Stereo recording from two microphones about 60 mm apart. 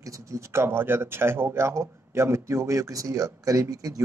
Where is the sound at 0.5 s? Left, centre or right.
Right.